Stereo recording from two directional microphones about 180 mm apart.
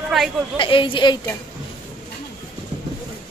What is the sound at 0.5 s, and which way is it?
Speech, 30° left (ahead or behind).